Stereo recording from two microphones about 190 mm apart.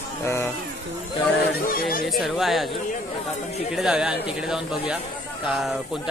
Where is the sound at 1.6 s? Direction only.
50° left (ahead or behind).